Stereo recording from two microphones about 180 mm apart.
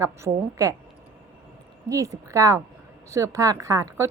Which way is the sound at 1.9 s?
15° right (ahead or behind).